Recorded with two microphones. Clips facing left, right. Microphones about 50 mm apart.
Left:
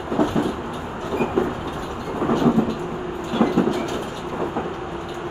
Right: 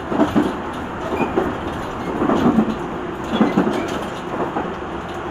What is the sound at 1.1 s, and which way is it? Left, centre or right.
Train, right.